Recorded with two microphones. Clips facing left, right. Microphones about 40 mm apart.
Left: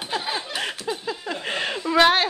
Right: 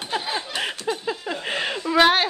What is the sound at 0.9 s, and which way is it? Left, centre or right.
Speech, centre.